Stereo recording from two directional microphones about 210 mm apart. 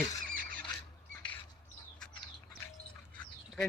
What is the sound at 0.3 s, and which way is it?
Rodents, 40° right (ahead or behind).